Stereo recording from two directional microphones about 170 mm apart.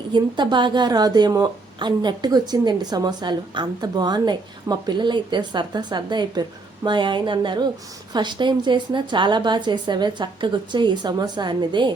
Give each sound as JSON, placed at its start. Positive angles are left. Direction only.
{"t": 0.1, "sound": "a woman's voice", "side_deg": -25}